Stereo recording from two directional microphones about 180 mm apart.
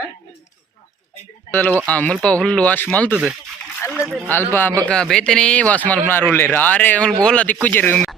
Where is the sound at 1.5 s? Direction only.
10° left (ahead or behind).